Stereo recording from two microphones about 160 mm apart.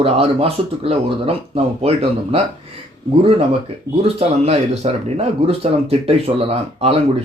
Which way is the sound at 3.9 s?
15° right (ahead or behind).